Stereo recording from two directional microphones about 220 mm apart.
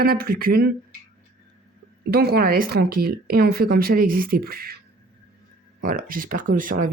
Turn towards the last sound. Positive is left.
turn(degrees=-40)  # may be behind; listen again after turning